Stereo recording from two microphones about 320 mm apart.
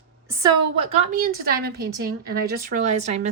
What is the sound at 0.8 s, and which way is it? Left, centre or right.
A woman's voice, right.